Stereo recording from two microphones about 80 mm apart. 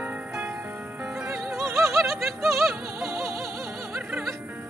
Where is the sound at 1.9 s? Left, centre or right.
Centre.